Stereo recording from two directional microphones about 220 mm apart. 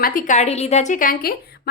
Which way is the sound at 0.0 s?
40° left (ahead or behind).